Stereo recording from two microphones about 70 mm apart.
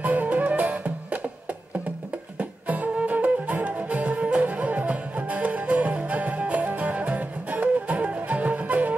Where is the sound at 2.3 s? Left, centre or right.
Right.